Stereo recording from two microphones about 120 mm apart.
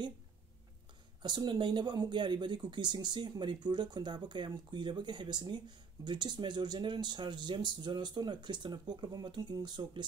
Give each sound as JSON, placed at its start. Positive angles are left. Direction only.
{"t": 1.2, "sound": "speech", "side_deg": -40}